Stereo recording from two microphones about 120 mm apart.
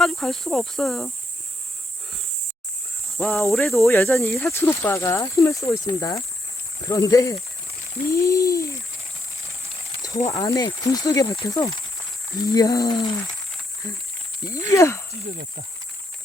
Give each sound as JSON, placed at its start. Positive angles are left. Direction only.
{"t": 0.0, "sound": "speech", "side_deg": 5}
{"t": 3.3, "sound": "speech", "side_deg": 0}
{"t": 3.9, "sound": "speech", "side_deg": 20}
{"t": 10.3, "sound": "speech", "side_deg": 35}
{"t": 14.7, "sound": "speech", "side_deg": 25}